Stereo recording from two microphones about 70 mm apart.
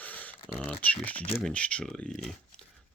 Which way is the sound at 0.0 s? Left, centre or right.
Left.